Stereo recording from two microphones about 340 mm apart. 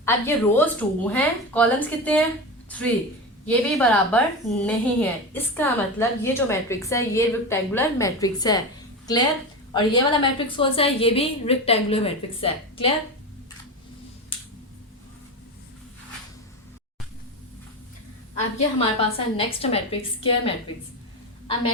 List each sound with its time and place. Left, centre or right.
0.0 s a woman's voice: centre
9.7 s a woman's voice: centre
18.3 s a woman's voice: centre